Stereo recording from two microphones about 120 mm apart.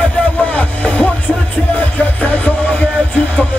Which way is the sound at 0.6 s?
10° left (ahead or behind).